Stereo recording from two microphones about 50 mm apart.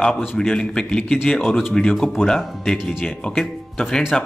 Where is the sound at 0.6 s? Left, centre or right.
Centre.